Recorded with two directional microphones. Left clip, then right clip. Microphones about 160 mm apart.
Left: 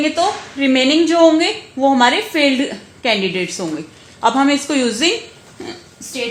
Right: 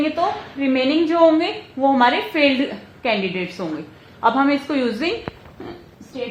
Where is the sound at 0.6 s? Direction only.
50° left (ahead or behind).